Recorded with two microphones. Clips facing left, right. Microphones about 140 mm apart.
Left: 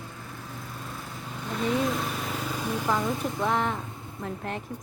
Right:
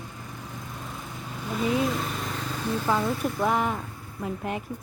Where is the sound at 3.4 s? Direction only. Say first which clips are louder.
Right 1 dB; 5° right (ahead or behind).